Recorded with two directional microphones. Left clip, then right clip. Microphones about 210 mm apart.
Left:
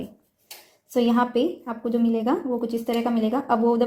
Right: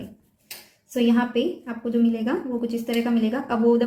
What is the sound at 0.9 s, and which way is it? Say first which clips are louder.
Speech: left 1 dB; 35° left (ahead or behind).